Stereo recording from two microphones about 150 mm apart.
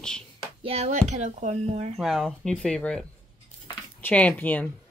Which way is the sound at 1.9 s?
Centre (ahead or behind).